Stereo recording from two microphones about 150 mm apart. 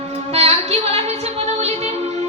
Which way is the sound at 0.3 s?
45° right (ahead or behind).